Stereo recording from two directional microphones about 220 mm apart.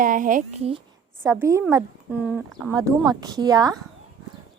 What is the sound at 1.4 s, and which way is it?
Speech, 15° right (ahead or behind).